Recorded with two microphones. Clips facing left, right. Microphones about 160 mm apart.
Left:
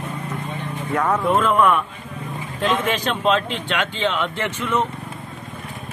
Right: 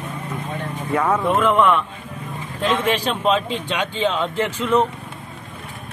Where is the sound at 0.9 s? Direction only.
Centre (ahead or behind).